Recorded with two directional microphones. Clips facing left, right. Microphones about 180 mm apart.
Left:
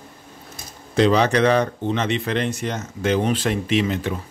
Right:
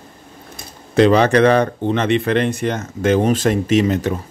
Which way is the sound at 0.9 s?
55° right (ahead or behind).